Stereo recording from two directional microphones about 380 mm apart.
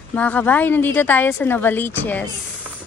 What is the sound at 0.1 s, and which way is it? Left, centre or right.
A woman's voice, centre.